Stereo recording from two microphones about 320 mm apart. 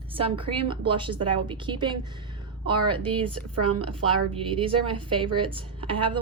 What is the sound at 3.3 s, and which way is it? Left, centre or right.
Speech, right.